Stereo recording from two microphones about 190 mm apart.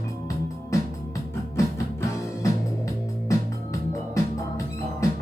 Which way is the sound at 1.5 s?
15° left (ahead or behind).